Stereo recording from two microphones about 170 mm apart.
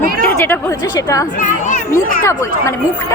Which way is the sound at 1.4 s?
45° left (ahead or behind).